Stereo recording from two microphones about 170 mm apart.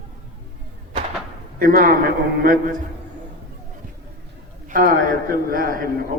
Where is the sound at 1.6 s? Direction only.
55° right (ahead or behind).